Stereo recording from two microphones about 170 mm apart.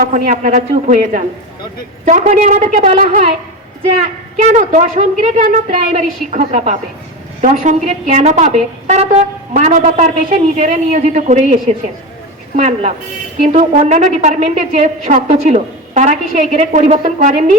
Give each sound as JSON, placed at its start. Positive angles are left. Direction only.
{"t": 0.0, "sound": "a woman's voice", "side_deg": -50}
{"t": 12.5, "sound": "a woman's voice", "side_deg": -45}